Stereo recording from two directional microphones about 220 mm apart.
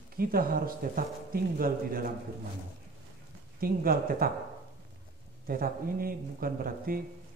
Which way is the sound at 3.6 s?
40° right (ahead or behind).